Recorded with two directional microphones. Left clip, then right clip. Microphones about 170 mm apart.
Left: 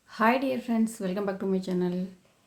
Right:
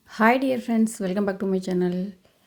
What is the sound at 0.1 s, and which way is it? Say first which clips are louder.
Speech: right 5 dB; 40° right (ahead or behind).